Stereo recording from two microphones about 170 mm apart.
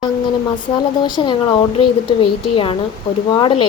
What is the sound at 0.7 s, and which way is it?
Speech, 25° left (ahead or behind).